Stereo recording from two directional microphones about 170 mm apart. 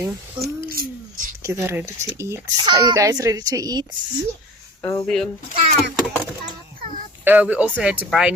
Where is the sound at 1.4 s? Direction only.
15° right (ahead or behind).